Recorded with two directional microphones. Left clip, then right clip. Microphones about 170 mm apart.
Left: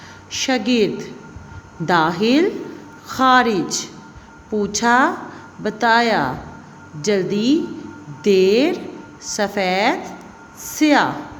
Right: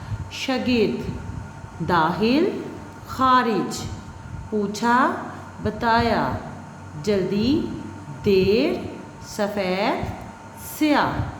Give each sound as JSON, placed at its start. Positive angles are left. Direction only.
{"t": 0.3, "sound": "a woman's voice", "side_deg": 40}